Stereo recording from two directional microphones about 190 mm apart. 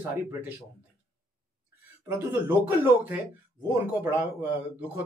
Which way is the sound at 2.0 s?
10° right (ahead or behind).